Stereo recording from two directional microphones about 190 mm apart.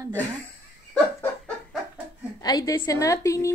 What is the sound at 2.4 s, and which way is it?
Speech, 20° left (ahead or behind).